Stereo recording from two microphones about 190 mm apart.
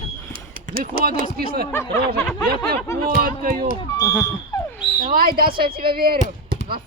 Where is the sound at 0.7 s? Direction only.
50° right (ahead or behind).